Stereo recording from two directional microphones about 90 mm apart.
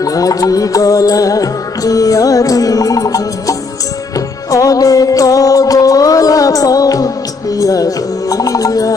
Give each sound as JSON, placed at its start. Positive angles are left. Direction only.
{"t": 0.0, "sound": "music", "side_deg": 40}